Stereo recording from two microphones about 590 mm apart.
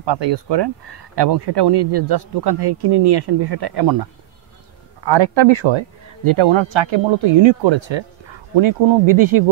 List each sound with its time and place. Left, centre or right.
0.0 s speech: right